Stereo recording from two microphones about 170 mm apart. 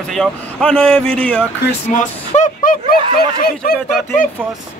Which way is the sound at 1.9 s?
50° left (ahead or behind).